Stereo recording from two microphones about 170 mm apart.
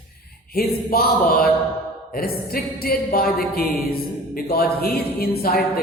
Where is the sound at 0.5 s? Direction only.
60° left (ahead or behind).